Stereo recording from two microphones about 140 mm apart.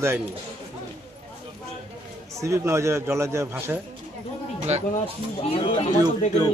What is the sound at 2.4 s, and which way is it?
A man's voice, 20° right (ahead or behind).